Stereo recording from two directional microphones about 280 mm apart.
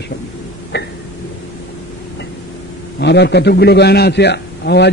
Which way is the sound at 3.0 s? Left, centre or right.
Left.